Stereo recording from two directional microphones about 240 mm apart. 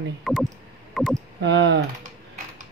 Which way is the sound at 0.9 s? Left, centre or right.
Centre.